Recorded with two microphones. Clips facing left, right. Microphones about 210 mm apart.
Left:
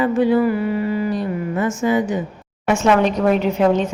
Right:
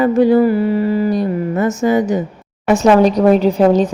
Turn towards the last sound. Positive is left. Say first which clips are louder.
# right 5 dB
turn(degrees=-35)  # may be behind; listen again after turning